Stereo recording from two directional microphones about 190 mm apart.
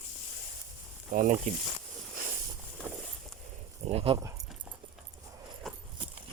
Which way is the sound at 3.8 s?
30° right (ahead or behind).